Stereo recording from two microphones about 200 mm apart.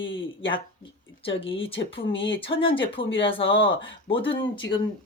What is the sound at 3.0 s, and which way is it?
Speech, 65° left (ahead or behind).